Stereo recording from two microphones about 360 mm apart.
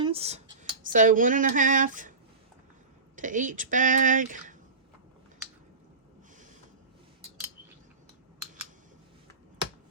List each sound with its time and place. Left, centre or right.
0.0 s speech: centre
3.2 s speech: right